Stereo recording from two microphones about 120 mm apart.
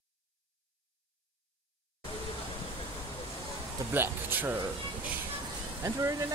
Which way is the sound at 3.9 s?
15° right (ahead or behind).